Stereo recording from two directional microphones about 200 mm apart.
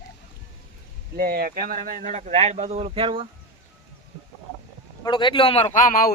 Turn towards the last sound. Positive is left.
turn(degrees=45)  # may be behind; listen again after turning